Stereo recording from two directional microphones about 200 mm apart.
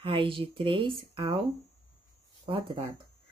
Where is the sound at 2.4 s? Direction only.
25° right (ahead or behind).